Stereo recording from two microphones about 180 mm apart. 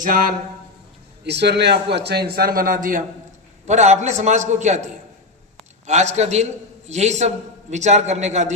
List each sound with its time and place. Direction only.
0.0 s speech: 50° right (ahead or behind)
1.2 s a man's voice: 70° right (ahead or behind); by 8.5 s 40° right (ahead or behind)